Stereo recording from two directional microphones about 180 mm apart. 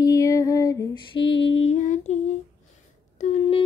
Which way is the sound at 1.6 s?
40° left (ahead or behind).